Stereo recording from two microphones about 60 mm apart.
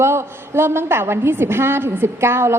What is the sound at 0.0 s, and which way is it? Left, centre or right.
A woman's voice, right.